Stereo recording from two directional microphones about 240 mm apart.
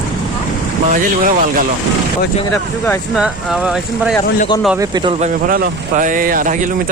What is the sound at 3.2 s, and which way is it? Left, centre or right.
Speech, centre.